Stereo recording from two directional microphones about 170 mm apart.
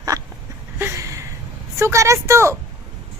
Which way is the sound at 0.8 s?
15° right (ahead or behind).